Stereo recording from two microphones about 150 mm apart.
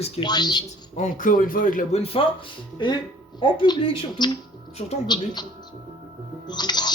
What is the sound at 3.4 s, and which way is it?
Speech, 35° left (ahead or behind).